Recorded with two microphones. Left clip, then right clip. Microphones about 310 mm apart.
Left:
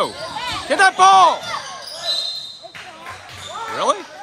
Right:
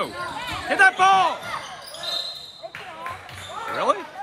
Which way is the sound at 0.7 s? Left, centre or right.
Centre.